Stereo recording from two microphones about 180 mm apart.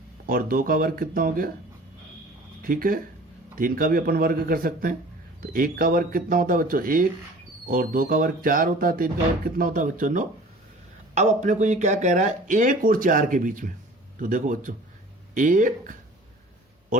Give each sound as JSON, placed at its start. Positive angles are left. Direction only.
{"t": 0.3, "sound": "speech", "side_deg": -50}
{"t": 2.6, "sound": "speech", "side_deg": -50}